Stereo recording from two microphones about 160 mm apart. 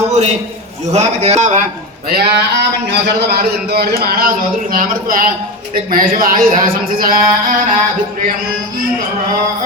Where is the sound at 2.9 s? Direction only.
85° right.